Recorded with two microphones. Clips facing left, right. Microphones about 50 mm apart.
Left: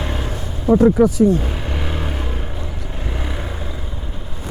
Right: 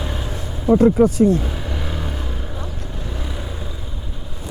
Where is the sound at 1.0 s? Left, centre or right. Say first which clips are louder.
Left 1 dB; right.